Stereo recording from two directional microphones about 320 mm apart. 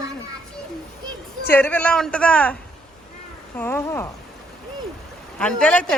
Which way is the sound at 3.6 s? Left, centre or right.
Centre.